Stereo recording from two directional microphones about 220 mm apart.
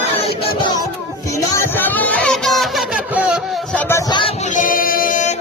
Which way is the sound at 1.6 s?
10° left (ahead or behind).